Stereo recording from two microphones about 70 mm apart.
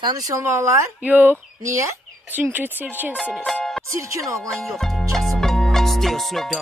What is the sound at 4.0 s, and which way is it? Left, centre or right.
Speech, right.